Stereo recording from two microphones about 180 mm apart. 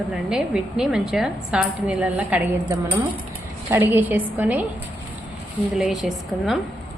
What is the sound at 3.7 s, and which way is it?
Speech, 10° right (ahead or behind).